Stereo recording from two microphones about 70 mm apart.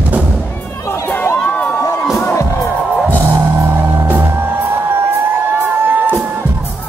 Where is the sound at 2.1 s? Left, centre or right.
Left.